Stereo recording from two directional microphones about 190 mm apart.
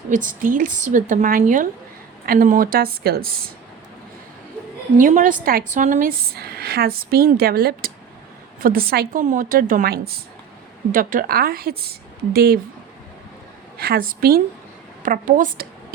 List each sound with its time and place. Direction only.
0.1 s a woman's voice: 45° right (ahead or behind)
4.9 s a woman's voice: 45° right (ahead or behind)
13.7 s a woman's voice: 55° right (ahead or behind)